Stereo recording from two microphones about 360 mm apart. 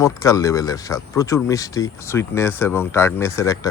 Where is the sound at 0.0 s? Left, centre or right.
Centre.